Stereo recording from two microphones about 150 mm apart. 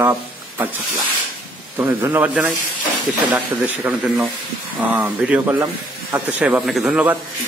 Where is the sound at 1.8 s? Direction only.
15° right (ahead or behind).